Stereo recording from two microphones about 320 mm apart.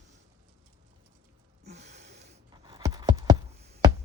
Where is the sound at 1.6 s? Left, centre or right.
Right.